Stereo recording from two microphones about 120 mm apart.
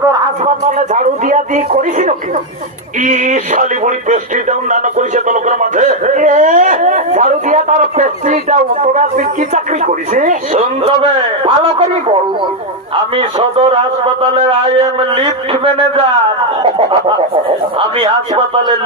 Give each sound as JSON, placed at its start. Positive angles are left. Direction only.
{"t": 0.8, "sound": "a man's voice", "side_deg": -90}
{"t": 13.1, "sound": "a man's voice", "side_deg": -50}
{"t": 17.7, "sound": "a man's voice", "side_deg": -50}